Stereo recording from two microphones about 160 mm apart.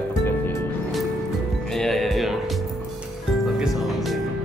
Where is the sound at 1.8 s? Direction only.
Centre (ahead or behind).